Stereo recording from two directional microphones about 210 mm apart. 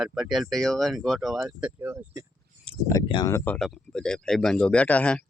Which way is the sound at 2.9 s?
20° left (ahead or behind).